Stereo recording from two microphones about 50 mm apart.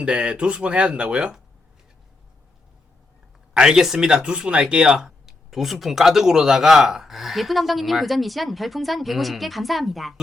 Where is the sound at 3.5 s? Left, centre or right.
Centre.